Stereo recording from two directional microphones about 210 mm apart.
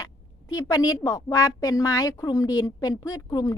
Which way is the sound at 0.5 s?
15° left (ahead or behind).